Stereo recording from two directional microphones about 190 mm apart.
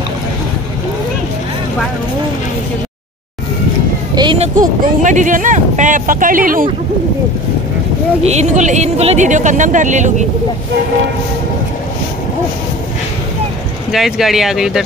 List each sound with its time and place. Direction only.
4.1 s a sound: 25° right (ahead or behind)
4.6 s speech: 40° right (ahead or behind)
8.2 s speech: 35° right (ahead or behind)
13.9 s speech: centre (ahead or behind)